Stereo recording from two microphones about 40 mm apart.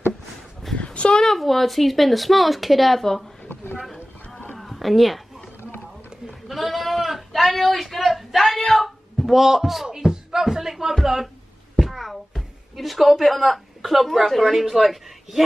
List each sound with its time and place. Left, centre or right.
0.7 s a sound: left
1.2 s speech: centre
3.8 s boat: centre
4.6 s a sound: centre
6.2 s sheep: centre
9.8 s music: centre
11.8 s a woman's voice: centre